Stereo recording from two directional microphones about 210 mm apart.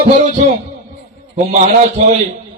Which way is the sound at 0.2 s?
40° right (ahead or behind).